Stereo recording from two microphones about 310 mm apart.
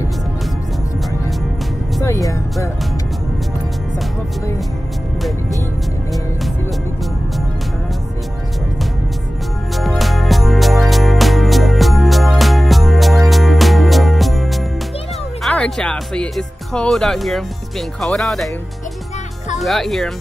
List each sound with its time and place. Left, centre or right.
2.0 s music: centre
9.8 s music: centre
15.4 s speech: centre
19.6 s speech: centre